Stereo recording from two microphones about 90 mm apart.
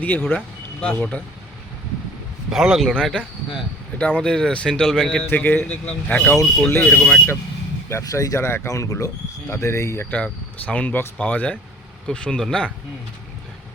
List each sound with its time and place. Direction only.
0.0 s speech: 20° left (ahead or behind)
2.5 s speech: 5° right (ahead or behind)
2.9 s speech: 10° left (ahead or behind)
5.3 s speech: 20° left (ahead or behind)
6.3 s speech: centre (ahead or behind)
6.8 s speech: 20° left (ahead or behind)
8.0 s speech: 40° left (ahead or behind)
10.1 s speech: 15° left (ahead or behind)